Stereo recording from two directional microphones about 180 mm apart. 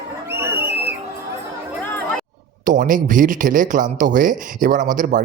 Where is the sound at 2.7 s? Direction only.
50° right (ahead or behind).